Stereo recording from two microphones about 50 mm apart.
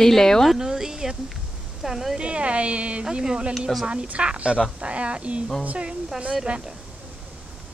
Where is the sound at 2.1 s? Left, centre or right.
Right.